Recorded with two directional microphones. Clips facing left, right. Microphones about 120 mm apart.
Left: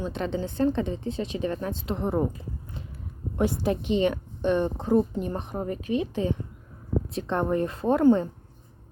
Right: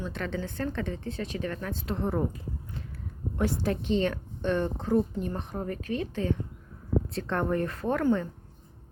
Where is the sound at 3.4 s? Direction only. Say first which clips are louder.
Left 3 dB; 15° left (ahead or behind).